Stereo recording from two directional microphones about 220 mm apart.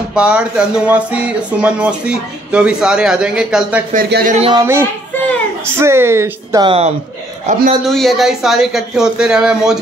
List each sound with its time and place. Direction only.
0.1 s speech: 5° right (ahead or behind)
3.9 s speech: 40° right (ahead or behind)
4.6 s speech: 10° right (ahead or behind)
7.4 s speech: 35° right (ahead or behind)
7.8 s speech: centre (ahead or behind)